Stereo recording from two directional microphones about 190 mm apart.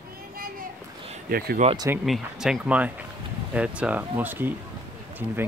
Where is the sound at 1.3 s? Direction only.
50° right (ahead or behind).